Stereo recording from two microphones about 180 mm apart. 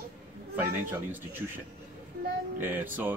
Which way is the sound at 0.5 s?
10° right (ahead or behind).